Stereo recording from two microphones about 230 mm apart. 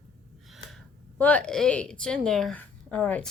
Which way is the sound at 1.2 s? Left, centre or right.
Centre.